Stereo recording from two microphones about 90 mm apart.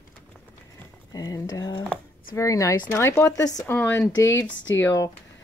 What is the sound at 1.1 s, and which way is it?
Speech, 45° left (ahead or behind).